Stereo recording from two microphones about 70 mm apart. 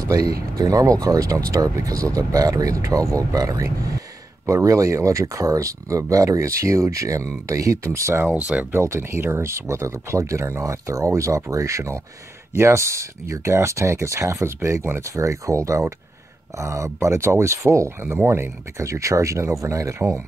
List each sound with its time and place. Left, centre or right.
0.1 s speech: right
8.4 s speech: centre
8.7 s speech: right
18.1 s speech: right